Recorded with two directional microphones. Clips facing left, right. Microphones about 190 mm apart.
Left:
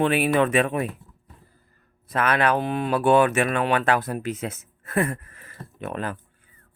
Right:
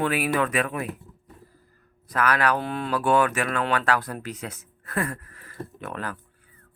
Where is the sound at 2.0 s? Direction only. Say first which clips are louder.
Left 2 dB; 25° left (ahead or behind).